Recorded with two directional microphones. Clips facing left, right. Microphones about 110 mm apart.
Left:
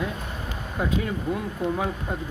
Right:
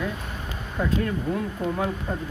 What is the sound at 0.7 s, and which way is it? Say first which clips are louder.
Speech: right 1 dB; 10° left (ahead or behind).